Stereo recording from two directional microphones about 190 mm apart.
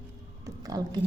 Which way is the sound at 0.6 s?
20° right (ahead or behind).